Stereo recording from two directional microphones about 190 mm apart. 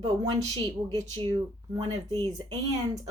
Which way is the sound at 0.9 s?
20° right (ahead or behind).